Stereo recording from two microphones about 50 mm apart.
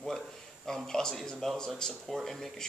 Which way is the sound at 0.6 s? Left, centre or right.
Centre.